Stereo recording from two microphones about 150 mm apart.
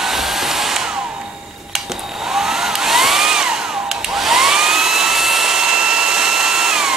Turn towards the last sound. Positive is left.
turn(degrees=-5)  # may be behind; listen again after turning